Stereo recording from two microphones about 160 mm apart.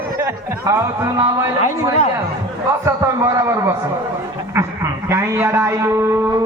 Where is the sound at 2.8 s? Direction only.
20° right (ahead or behind).